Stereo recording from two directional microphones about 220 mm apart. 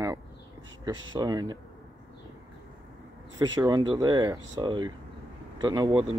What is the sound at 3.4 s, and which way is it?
Speech, 15° right (ahead or behind).